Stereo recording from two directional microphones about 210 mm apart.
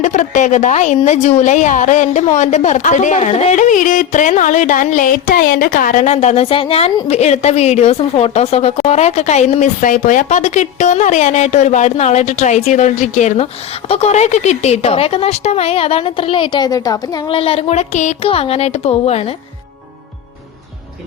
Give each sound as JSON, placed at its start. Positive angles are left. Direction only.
{"t": 0.0, "sound": "a woman's voice", "side_deg": 35}